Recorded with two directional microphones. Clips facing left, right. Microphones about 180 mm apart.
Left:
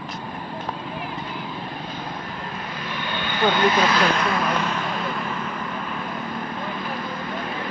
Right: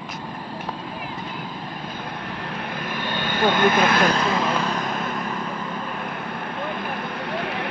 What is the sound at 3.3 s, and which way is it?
Speech, 50° right (ahead or behind).